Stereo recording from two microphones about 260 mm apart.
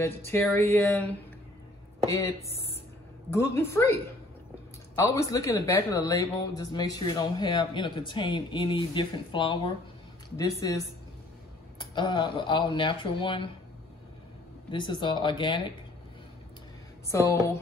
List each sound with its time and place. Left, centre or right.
0.0 s a man's voice: centre
2.0 s a man's voice: centre
11.8 s a man's voice: centre
14.7 s a man's voice: centre
17.1 s a man's voice: centre